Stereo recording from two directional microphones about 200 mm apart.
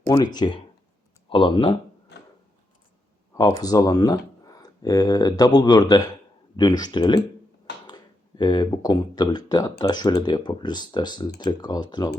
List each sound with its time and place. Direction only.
0.3 s speech: 20° left (ahead or behind)
2.1 s wood: 55° left (ahead or behind)
3.3 s speech: 20° left (ahead or behind)